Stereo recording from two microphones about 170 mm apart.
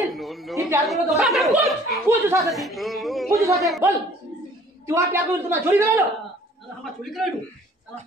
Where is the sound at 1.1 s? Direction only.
Centre (ahead or behind).